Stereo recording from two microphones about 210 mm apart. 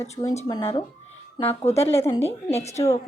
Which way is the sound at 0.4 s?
15° left (ahead or behind).